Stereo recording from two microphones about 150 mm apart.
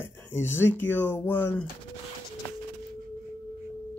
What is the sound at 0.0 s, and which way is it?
Speech, 15° left (ahead or behind).